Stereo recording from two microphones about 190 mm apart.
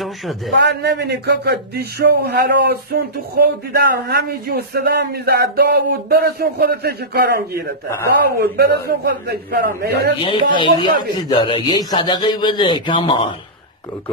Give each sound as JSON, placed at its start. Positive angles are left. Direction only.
{"t": 0.6, "sound": "speech", "side_deg": -65}
{"t": 10.2, "sound": "a man's voice", "side_deg": 25}